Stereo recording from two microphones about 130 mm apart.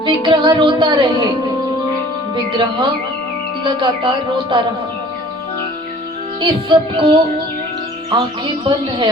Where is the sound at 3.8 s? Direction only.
35° right (ahead or behind).